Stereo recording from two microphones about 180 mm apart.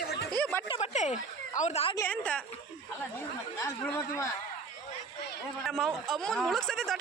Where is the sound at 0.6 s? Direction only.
35° left (ahead or behind).